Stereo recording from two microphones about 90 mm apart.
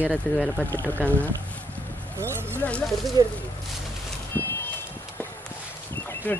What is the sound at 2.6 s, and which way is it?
Speech, 15° left (ahead or behind).